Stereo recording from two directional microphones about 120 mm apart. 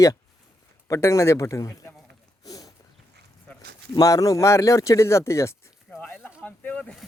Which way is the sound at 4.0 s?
30° left (ahead or behind).